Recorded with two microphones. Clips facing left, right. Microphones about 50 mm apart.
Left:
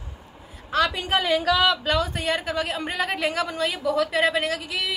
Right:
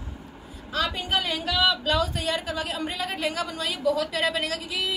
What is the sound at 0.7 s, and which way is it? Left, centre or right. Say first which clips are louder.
Speech: left 5 dB; left.